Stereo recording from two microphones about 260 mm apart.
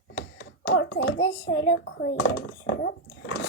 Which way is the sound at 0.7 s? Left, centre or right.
Left.